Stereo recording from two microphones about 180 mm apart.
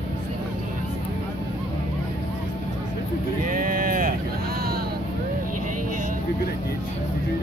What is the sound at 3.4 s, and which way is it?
Sheep, 50° right (ahead or behind).